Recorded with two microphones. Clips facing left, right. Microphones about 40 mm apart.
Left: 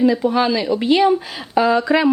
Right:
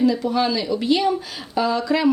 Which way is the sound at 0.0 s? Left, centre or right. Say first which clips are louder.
Left 3 dB; left.